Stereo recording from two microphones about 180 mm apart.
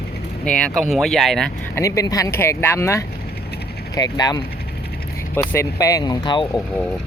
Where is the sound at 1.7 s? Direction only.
15° left (ahead or behind).